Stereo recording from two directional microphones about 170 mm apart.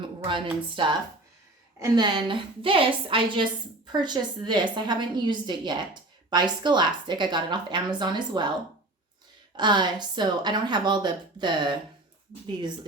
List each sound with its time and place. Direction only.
0.0 s a woman's voice: 30° right (ahead or behind)
9.6 s a woman's voice: 25° right (ahead or behind)